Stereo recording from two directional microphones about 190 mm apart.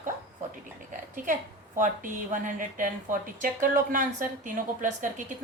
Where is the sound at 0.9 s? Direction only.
45° right (ahead or behind).